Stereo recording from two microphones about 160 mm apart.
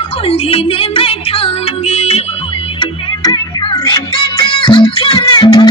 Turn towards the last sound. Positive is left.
turn(degrees=25)  # may be behind; listen again after turning